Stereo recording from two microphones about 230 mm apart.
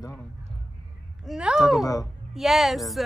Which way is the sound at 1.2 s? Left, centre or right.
Centre.